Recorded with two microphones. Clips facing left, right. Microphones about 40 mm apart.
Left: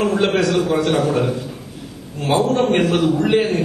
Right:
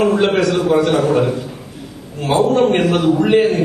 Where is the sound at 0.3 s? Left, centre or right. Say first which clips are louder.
Right 2 dB; centre.